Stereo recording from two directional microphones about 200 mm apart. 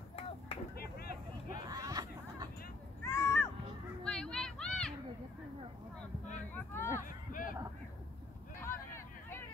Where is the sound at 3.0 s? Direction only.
15° left (ahead or behind).